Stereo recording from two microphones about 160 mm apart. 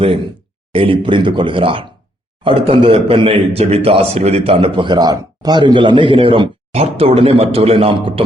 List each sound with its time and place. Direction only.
0.7 s a man's voice: 35° right (ahead or behind)